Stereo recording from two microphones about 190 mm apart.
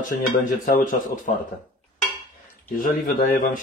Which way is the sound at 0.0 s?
45° left (ahead or behind).